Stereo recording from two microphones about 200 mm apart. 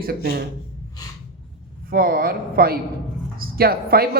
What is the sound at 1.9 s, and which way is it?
A woman's voice, 45° right (ahead or behind).